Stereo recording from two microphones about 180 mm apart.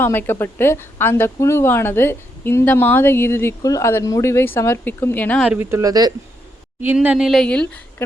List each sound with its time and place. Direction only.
0.0 s a woman's voice: 10° left (ahead or behind)
5.5 s speech: 15° right (ahead or behind)
6.8 s a woman's voice: 10° right (ahead or behind)